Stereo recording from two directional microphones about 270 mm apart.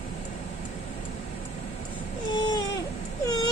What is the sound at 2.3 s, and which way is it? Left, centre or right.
Baby cry, centre.